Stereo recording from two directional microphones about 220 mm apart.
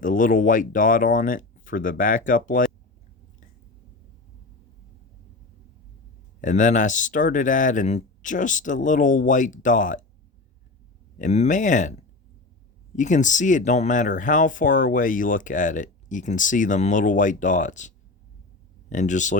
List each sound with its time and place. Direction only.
0.0 s speech: 35° left (ahead or behind)
6.4 s speech: 35° left (ahead or behind)
11.2 s speech: 30° left (ahead or behind)
13.0 s speech: 35° left (ahead or behind)